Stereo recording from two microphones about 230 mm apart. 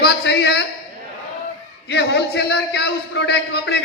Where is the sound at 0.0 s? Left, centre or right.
Left.